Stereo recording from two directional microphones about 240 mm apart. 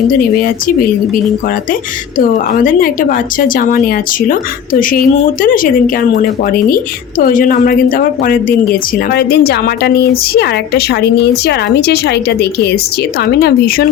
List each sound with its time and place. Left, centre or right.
2.1 s a woman's voice: left